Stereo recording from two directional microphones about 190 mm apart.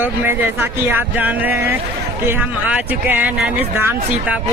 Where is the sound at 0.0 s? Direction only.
10° right (ahead or behind).